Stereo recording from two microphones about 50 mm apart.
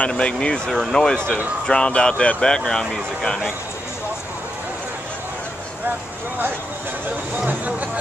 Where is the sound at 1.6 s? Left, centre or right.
Centre.